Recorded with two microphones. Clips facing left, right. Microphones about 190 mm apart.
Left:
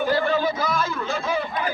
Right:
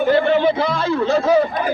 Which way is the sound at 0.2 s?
25° right (ahead or behind).